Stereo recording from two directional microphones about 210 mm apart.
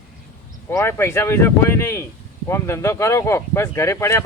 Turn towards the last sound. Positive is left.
turn(degrees=15)  # may be behind; listen again after turning